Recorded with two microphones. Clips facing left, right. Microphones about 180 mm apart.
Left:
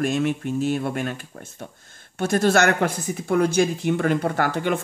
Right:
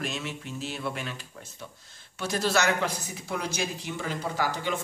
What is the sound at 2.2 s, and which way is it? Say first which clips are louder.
Speech: left 8 dB; 50° left (ahead or behind).